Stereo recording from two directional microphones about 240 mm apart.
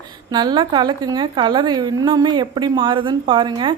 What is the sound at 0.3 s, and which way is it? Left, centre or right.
A woman's voice, centre.